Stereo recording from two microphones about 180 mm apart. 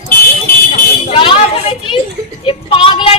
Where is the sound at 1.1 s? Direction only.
30° left (ahead or behind).